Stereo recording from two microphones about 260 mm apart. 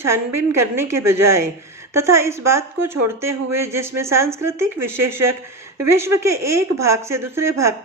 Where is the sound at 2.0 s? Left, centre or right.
Centre.